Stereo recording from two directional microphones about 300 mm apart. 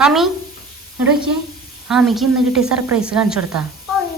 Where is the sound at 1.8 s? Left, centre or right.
Centre.